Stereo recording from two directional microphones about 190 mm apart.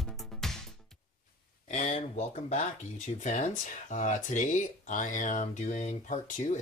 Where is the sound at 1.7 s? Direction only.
35° left (ahead or behind).